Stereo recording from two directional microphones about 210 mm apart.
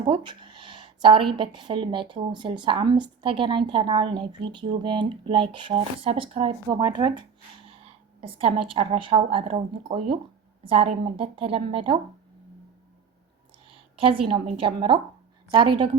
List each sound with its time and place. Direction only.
0.0 s speech: 20° right (ahead or behind)
13.7 s a woman's voice: 25° right (ahead or behind)